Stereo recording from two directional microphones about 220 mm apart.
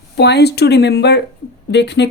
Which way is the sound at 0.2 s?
50° left (ahead or behind).